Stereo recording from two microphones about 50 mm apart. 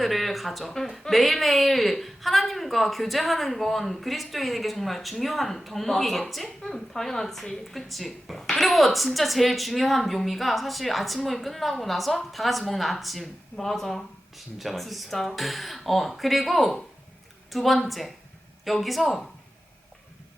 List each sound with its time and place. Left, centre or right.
0.0 s a woman's voice: centre